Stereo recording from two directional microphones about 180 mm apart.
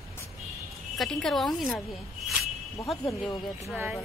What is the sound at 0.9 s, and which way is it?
A woman's voice, centre (ahead or behind).